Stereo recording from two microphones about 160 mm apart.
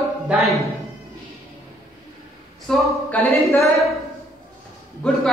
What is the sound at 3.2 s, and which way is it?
Speech, 15° left (ahead or behind).